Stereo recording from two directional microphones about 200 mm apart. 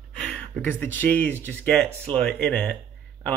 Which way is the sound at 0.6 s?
10° left (ahead or behind).